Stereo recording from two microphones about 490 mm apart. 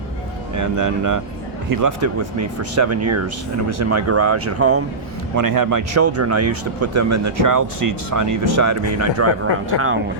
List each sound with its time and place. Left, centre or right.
0.5 s speech: right
5.4 s speech: right